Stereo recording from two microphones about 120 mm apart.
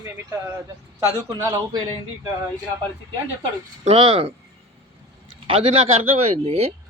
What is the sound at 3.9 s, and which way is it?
Speech, 55° right (ahead or behind).